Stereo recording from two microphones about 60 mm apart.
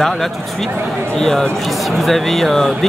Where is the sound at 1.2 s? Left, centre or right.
Centre.